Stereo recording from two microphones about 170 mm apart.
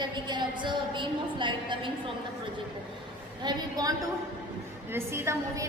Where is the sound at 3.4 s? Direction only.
25° right (ahead or behind).